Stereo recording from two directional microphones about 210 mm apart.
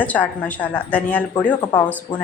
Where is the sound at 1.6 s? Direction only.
20° left (ahead or behind).